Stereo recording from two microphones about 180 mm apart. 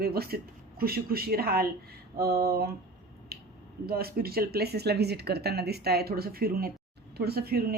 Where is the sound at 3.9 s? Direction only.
55° right (ahead or behind).